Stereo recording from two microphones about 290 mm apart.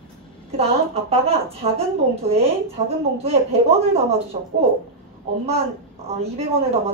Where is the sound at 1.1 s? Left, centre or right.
Centre.